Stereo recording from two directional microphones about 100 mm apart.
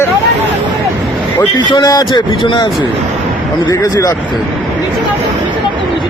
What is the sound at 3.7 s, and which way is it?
Speech, 35° left (ahead or behind).